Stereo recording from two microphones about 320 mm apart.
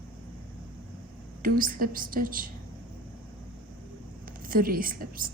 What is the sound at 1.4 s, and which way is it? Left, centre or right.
A woman's voice, right.